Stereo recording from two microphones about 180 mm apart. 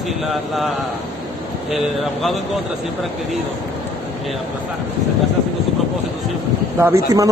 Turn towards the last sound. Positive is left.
turn(degrees=-10)  # may be behind; listen again after turning